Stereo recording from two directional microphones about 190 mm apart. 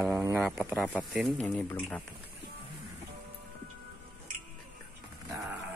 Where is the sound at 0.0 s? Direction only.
10° right (ahead or behind).